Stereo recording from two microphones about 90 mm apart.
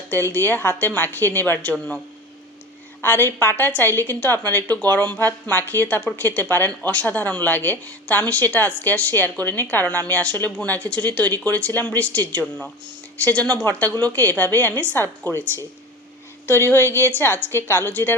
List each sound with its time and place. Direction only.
0.1 s speech: 25° left (ahead or behind)
3.0 s speech: 25° left (ahead or behind)